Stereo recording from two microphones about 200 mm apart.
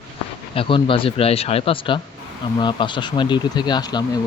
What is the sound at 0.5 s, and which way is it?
Speech, 25° left (ahead or behind).